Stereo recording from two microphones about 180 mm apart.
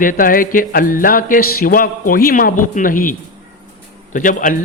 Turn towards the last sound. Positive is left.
turn(degrees=45)  # may be behind; listen again after turning